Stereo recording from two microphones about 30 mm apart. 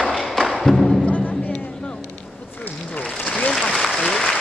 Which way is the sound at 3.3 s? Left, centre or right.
Left.